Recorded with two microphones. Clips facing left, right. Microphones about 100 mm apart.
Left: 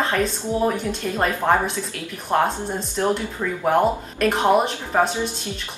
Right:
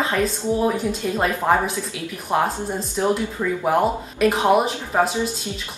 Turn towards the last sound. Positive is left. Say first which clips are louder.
# even
turn(degrees=-5)  # may be behind; listen again after turning